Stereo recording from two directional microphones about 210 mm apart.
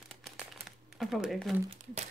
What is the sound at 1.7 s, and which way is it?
Speech, 30° right (ahead or behind).